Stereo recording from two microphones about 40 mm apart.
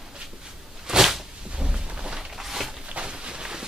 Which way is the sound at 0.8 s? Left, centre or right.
Centre.